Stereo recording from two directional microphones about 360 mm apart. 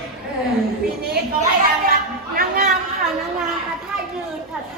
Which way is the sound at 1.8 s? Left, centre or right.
Right.